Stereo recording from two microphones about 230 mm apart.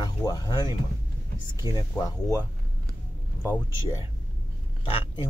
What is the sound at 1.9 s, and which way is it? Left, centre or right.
Speech, centre.